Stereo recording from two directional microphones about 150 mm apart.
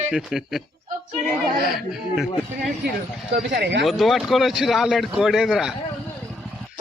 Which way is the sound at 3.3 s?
90° right.